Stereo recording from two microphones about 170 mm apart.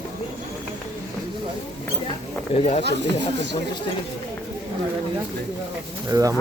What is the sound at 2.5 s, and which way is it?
Speech, 35° left (ahead or behind).